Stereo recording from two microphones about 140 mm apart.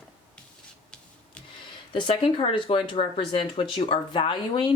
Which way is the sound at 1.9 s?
35° left (ahead or behind).